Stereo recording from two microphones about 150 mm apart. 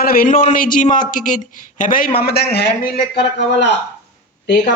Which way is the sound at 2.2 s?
90° left.